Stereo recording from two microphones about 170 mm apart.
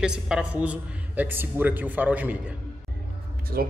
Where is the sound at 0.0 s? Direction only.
5° right (ahead or behind).